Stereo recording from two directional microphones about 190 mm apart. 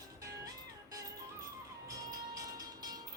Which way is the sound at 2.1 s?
20° right (ahead or behind).